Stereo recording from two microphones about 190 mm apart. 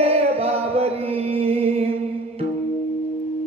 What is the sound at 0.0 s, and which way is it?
Music, 30° right (ahead or behind).